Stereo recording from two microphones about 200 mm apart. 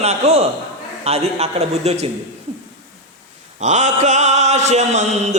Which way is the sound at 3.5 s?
35° right (ahead or behind).